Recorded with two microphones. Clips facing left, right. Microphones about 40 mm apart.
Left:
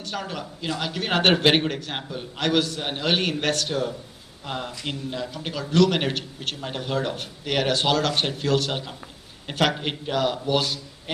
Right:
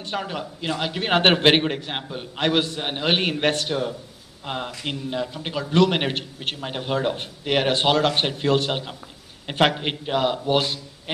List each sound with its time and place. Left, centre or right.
0.0 s a man's voice: right